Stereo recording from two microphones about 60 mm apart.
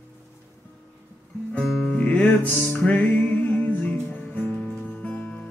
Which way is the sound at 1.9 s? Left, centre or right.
Left.